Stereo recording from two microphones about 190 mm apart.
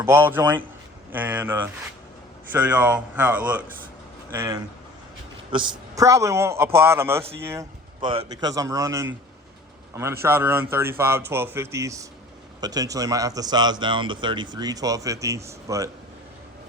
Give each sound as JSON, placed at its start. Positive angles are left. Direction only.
{"t": 0.0, "sound": "speech", "side_deg": -10}
{"t": 8.0, "sound": "a man's voice", "side_deg": -25}